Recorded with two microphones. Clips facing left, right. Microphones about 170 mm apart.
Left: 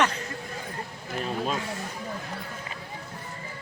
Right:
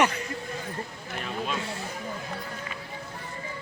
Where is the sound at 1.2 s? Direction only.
35° left (ahead or behind).